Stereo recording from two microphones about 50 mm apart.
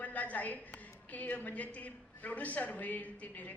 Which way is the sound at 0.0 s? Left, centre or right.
Left.